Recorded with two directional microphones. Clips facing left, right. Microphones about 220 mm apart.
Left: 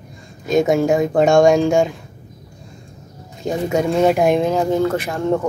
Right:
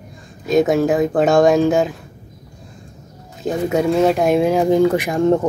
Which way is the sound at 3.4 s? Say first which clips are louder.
Right 1 dB; centre (ahead or behind).